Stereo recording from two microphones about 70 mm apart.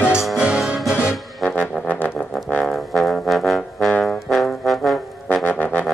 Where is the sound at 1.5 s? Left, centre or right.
Left.